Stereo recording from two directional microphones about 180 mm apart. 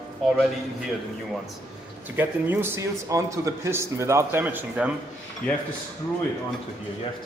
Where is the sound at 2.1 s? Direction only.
10° right (ahead or behind).